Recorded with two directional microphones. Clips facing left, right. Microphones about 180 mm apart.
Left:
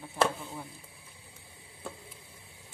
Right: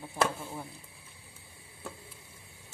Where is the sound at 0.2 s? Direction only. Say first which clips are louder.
Left 2 dB; 15° right (ahead or behind).